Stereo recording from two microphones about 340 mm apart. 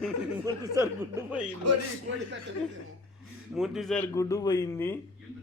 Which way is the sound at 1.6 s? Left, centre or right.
Right.